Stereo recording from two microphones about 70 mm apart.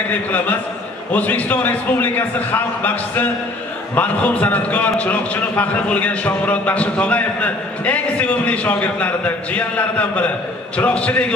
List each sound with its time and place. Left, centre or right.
0.1 s a man's voice: left